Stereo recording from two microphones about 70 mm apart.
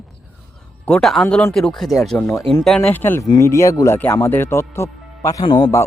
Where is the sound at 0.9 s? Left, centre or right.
Centre.